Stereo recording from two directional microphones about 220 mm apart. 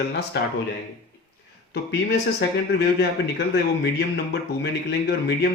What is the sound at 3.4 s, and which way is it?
Speech, 50° left (ahead or behind).